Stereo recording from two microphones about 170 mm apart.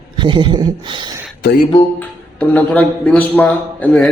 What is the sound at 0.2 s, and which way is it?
Speech, 25° right (ahead or behind).